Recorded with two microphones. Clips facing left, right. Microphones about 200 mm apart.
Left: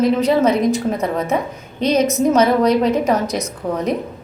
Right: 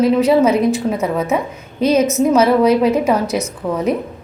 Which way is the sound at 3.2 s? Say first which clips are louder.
Right 2 dB; 35° left (ahead or behind).